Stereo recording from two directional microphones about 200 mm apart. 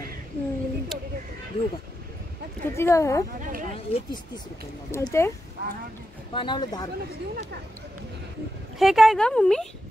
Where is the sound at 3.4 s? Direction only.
40° right (ahead or behind).